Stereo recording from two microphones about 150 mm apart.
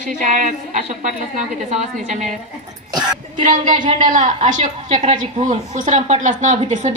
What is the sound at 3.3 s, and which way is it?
A woman's voice, 60° right (ahead or behind).